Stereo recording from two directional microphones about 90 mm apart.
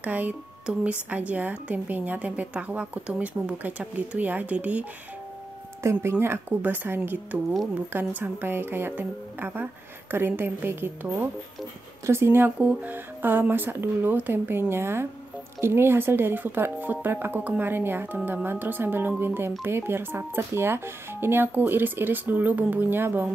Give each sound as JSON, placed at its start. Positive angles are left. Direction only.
{"t": 0.0, "sound": "a woman's voice", "side_deg": -15}
{"t": 5.8, "sound": "speech", "side_deg": -30}
{"t": 8.2, "sound": "speech", "side_deg": -25}